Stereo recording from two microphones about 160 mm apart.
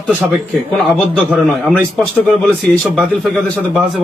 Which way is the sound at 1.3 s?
Centre (ahead or behind).